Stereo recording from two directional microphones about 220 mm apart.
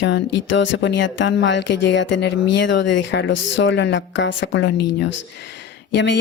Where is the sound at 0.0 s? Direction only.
55° left (ahead or behind).